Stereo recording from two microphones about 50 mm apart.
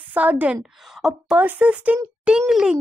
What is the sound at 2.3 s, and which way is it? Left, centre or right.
Speech, centre.